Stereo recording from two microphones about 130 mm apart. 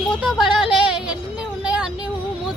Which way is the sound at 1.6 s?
5° right (ahead or behind).